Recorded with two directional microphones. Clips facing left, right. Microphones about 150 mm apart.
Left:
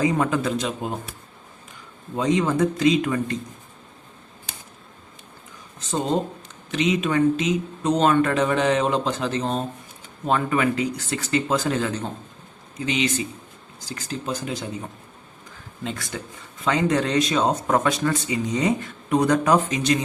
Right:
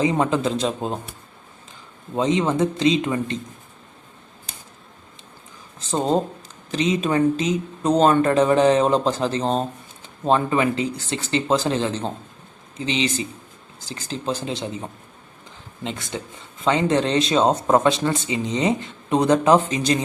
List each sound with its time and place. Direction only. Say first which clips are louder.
0.0 s speech: right 2 dB; 25° right (ahead or behind)
2.1 s speech: right 1 dB; 25° right (ahead or behind)
6.7 s speech: right 1 dB; 35° right (ahead or behind)
15.8 s speech: right 1 dB; 20° right (ahead or behind)